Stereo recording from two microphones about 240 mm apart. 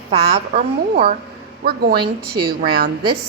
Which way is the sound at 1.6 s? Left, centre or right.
Right.